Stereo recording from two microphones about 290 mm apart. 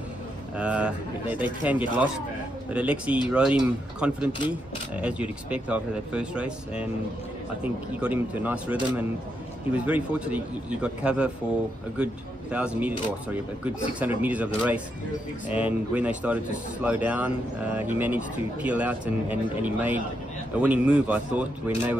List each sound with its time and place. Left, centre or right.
0.6 s speech: centre